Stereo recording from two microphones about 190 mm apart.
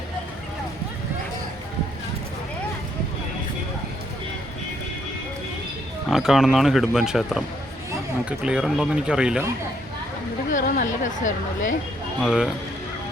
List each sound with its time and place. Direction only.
6.1 s speech: centre (ahead or behind)
10.5 s a woman's voice: 45° left (ahead or behind)
12.2 s speech: 5° right (ahead or behind)